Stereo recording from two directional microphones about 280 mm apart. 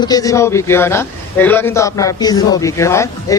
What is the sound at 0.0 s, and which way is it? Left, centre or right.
A man's voice, centre.